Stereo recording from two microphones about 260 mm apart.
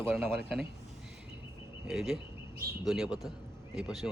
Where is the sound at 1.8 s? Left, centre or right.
Centre.